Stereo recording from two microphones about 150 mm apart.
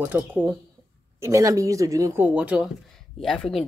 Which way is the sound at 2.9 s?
5° left (ahead or behind).